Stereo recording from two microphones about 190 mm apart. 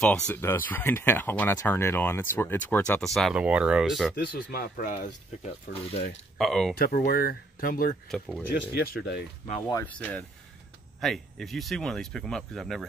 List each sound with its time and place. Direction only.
0.0 s speech: 5° left (ahead or behind)
4.1 s speech: 50° left (ahead or behind)
5.7 s speech: 30° left (ahead or behind)
6.3 s speech: centre (ahead or behind)
6.8 s speech: 50° left (ahead or behind)
8.1 s speech: centre (ahead or behind)
8.5 s speech: 50° left (ahead or behind)
9.7 s speech: 15° left (ahead or behind); by 12.8 s centre (ahead or behind)